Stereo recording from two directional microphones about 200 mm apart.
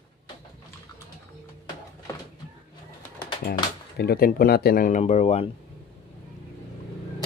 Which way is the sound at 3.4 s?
50° left (ahead or behind).